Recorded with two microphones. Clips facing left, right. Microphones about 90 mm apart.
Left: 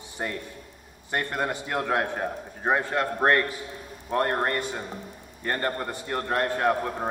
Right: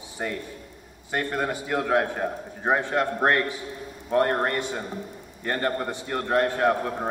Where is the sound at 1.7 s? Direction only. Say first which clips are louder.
Right 4 dB; centre (ahead or behind).